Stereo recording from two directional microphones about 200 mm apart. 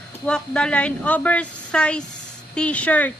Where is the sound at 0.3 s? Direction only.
5° left (ahead or behind).